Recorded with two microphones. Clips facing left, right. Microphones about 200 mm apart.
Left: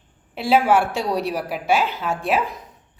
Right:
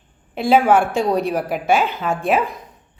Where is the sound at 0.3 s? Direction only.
50° right (ahead or behind).